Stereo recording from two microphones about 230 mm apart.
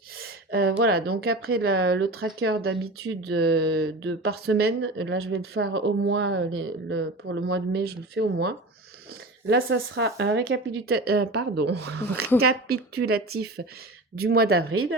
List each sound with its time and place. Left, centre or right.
0.5 s speech: right
1.4 s speech: right
1.6 s speech: right
4.4 s speech: right
9.5 s speech: right
14.7 s speech: right